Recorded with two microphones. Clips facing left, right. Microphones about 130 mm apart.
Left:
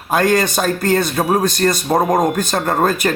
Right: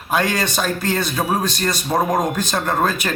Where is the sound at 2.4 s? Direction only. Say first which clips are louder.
Left 3 dB; 45° left (ahead or behind).